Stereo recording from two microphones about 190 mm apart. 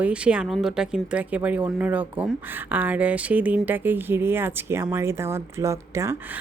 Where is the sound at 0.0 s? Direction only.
5° right (ahead or behind).